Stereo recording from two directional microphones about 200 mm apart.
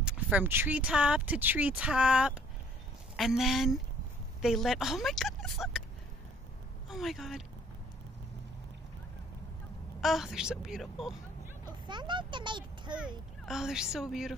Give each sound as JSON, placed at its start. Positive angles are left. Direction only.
{"t": 0.0, "sound": "speech", "side_deg": -10}
{"t": 6.9, "sound": "speech", "side_deg": 0}
{"t": 9.9, "sound": "speech", "side_deg": 0}
{"t": 11.9, "sound": "speech", "side_deg": -25}
{"t": 13.5, "sound": "speech", "side_deg": -5}